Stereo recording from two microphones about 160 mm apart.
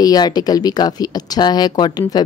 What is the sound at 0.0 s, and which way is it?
A woman's voice, 25° left (ahead or behind).